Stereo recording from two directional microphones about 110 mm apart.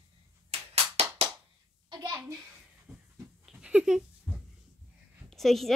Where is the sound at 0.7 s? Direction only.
70° right (ahead or behind).